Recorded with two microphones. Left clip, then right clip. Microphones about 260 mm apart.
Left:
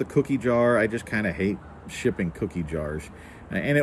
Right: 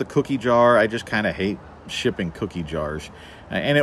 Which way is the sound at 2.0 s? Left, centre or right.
Centre.